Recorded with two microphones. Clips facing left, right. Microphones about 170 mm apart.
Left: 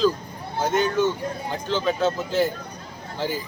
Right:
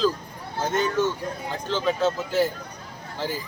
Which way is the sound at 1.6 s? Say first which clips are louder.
Left 1 dB; centre (ahead or behind).